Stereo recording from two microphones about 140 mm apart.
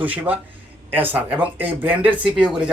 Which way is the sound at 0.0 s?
10° right (ahead or behind).